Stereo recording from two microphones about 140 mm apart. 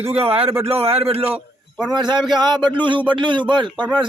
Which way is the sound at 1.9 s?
30° right (ahead or behind).